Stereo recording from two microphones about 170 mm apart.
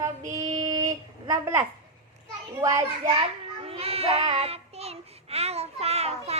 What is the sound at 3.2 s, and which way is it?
Child singing, 35° right (ahead or behind).